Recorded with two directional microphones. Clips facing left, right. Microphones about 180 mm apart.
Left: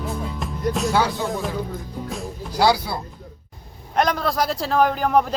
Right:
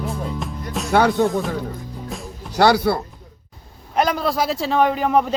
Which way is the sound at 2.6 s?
65° right (ahead or behind).